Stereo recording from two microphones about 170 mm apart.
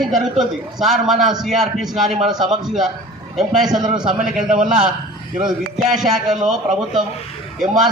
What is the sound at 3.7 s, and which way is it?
Speech, 25° right (ahead or behind).